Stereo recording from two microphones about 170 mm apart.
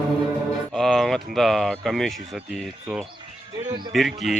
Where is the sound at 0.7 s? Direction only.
Centre (ahead or behind).